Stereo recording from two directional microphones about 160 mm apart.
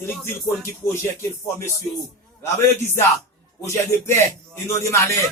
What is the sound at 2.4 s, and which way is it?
Speech, 15° left (ahead or behind).